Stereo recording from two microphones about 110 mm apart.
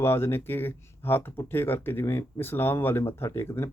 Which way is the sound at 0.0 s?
20° left (ahead or behind).